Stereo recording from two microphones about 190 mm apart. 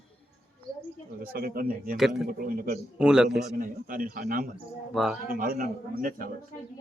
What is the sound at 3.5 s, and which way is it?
Speech, 50° right (ahead or behind).